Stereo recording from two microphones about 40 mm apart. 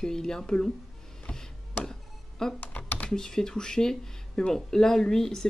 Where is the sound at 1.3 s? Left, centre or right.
Left.